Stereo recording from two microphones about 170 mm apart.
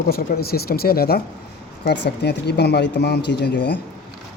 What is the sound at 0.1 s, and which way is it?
Speech, 65° left (ahead or behind).